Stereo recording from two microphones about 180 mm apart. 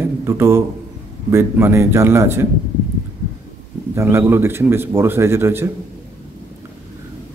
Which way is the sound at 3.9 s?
15° right (ahead or behind).